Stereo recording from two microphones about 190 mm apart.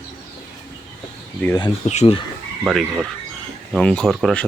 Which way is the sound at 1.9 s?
35° left (ahead or behind).